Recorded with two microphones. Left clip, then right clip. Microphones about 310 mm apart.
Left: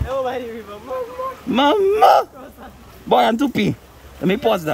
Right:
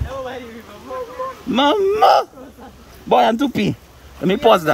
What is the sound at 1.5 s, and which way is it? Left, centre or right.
Speech, centre.